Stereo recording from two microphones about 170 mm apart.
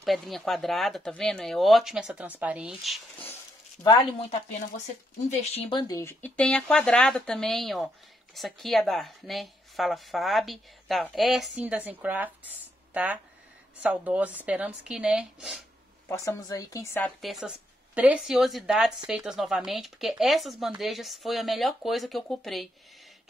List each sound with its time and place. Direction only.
0.0 s speech: centre (ahead or behind)
3.8 s a woman's voice: 25° left (ahead or behind)
4.3 s speech: 45° left (ahead or behind); by 5.9 s 30° left (ahead or behind)
5.9 s speech: 10° left (ahead or behind); by 15.6 s 5° right (ahead or behind)
16.1 s a woman's voice: 20° left (ahead or behind)
17.0 s speech: centre (ahead or behind)